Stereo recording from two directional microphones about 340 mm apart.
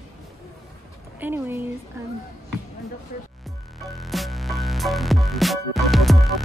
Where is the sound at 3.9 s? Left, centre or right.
Centre.